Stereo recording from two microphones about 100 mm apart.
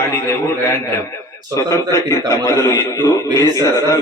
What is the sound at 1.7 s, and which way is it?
A man's voice, 30° left (ahead or behind).